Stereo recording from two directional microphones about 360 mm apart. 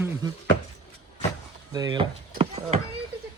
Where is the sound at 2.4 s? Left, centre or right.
Centre.